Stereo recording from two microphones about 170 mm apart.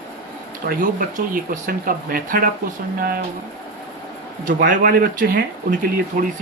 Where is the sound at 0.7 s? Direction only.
55° right (ahead or behind).